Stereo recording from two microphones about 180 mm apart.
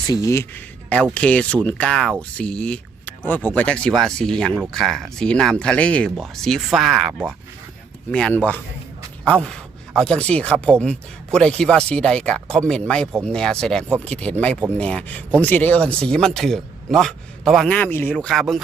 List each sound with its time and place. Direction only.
0.1 s speech: 15° left (ahead or behind)
1.1 s speech: 5° left (ahead or behind)